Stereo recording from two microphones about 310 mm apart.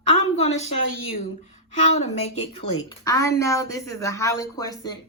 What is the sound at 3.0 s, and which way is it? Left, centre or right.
A woman's voice, centre.